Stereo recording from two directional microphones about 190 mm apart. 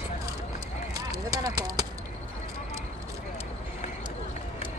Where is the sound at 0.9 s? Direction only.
20° right (ahead or behind).